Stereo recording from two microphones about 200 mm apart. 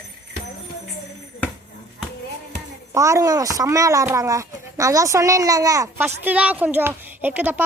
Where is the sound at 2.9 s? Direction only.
15° right (ahead or behind).